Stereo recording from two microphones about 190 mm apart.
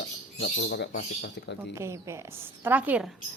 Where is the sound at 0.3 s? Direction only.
70° left (ahead or behind).